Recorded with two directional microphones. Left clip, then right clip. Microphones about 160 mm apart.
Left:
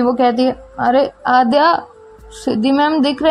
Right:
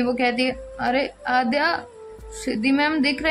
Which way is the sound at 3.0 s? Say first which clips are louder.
Left 6 dB; 35° left (ahead or behind).